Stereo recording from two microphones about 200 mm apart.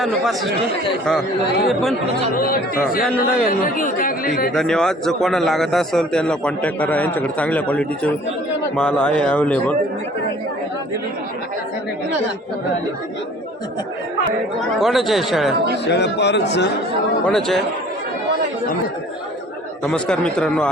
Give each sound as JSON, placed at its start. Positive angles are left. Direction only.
{"t": 0.0, "sound": "a man's voice", "side_deg": 0}
{"t": 1.6, "sound": "a man's voice", "side_deg": 0}
{"t": 2.3, "sound": "speech", "side_deg": 45}
{"t": 4.5, "sound": "a man's voice", "side_deg": 5}
{"t": 14.7, "sound": "a man's voice", "side_deg": 0}
{"t": 15.8, "sound": "a man's voice", "side_deg": 60}
{"t": 17.2, "sound": "a man's voice", "side_deg": 0}
{"t": 19.8, "sound": "a man's voice", "side_deg": 5}